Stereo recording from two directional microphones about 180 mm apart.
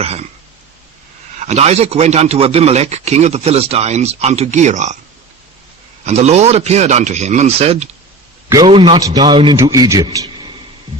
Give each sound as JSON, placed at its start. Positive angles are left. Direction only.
{"t": 0.0, "sound": "throat clearing", "side_deg": -35}
{"t": 1.4, "sound": "a man's voice", "side_deg": -40}
{"t": 6.1, "sound": "a man's voice", "side_deg": -40}
{"t": 8.4, "sound": "a man's voice", "side_deg": -20}